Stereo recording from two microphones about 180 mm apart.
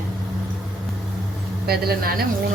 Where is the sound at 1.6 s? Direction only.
60° right (ahead or behind).